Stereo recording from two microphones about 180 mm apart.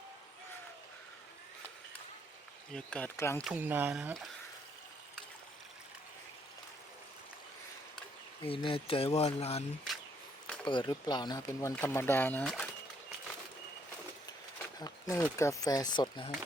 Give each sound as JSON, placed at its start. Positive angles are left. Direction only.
{"t": 2.7, "sound": "speech", "side_deg": 5}
{"t": 3.4, "sound": "speech", "side_deg": -10}
{"t": 8.4, "sound": "speech", "side_deg": 30}
{"t": 10.4, "sound": "a sound", "side_deg": 5}
{"t": 10.7, "sound": "speech", "side_deg": 25}
{"t": 14.8, "sound": "a sound", "side_deg": 20}
{"t": 15.4, "sound": "speech", "side_deg": 20}